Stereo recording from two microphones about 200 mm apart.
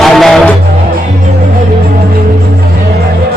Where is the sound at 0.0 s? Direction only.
Centre (ahead or behind).